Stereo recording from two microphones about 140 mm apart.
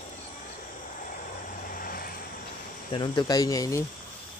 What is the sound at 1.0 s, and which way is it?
Vehicle, 75° left (ahead or behind).